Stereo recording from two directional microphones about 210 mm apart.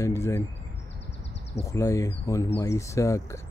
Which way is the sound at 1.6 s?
15° left (ahead or behind).